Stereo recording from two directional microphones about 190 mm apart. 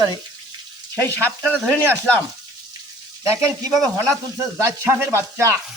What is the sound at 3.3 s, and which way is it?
Sizzle, 15° right (ahead or behind).